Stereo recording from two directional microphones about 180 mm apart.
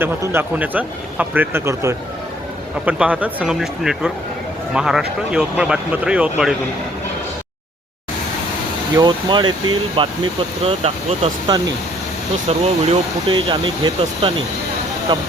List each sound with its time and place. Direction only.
0.0 s speech: 10° right (ahead or behind)
9.0 s speech: 25° right (ahead or behind)